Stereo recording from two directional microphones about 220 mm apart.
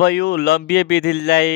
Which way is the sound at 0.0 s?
45° left (ahead or behind).